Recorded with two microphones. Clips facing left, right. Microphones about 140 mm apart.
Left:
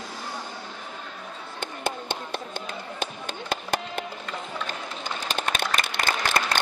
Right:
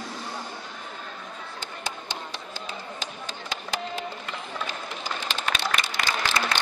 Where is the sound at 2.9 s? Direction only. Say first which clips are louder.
Left 4 dB; 55° left (ahead or behind).